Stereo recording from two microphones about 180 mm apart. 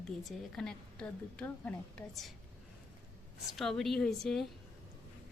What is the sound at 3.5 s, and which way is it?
Speech, centre (ahead or behind).